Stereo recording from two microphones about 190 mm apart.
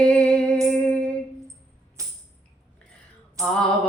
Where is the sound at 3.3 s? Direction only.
5° left (ahead or behind).